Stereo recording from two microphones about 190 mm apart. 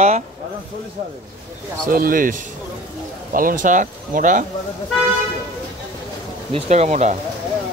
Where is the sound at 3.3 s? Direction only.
45° right (ahead or behind).